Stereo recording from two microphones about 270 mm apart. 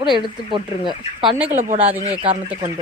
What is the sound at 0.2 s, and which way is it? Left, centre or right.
Speech, centre.